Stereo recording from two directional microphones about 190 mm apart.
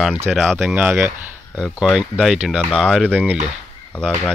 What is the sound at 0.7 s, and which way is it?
Speech, 10° right (ahead or behind).